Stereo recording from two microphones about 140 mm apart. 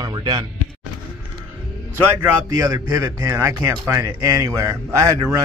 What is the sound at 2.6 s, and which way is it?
Speech, 25° right (ahead or behind).